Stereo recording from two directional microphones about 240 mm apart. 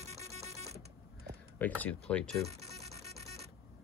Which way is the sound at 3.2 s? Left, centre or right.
Right.